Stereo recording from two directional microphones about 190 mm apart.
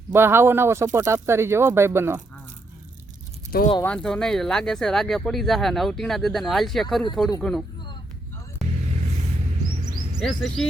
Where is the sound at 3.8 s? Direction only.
5° left (ahead or behind).